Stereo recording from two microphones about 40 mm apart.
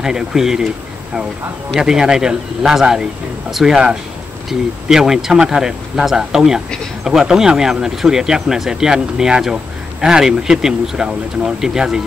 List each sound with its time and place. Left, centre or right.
0.0 s speech: centre
1.8 s speech: centre